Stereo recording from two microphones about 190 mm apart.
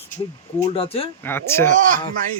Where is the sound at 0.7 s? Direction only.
30° left (ahead or behind).